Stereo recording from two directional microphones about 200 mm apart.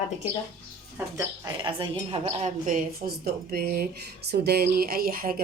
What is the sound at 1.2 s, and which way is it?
A woman's voice, 20° right (ahead or behind).